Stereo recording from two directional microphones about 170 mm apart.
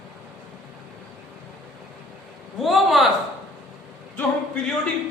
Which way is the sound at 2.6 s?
Centre (ahead or behind).